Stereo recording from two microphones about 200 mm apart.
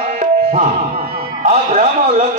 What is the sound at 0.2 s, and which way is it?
Tabla, 40° right (ahead or behind).